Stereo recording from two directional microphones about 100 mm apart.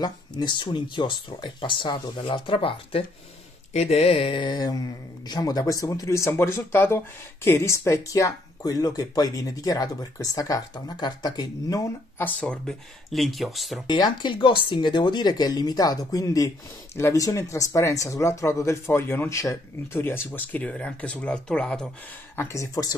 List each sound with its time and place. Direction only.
0.0 s speech: 45° left (ahead or behind)
3.7 s speech: 90° left; by 11.8 s 40° left (ahead or behind)
12.2 s speech: 15° left (ahead or behind); by 13.8 s centre (ahead or behind)
13.8 s speech: 45° left (ahead or behind); by 21.8 s 5° left (ahead or behind)
22.3 s speech: 25° left (ahead or behind)